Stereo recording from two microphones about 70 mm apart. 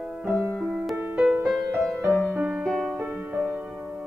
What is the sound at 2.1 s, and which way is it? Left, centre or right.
Music, centre.